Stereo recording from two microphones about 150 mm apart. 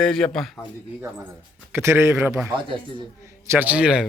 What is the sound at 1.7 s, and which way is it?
Speech, 15° right (ahead or behind).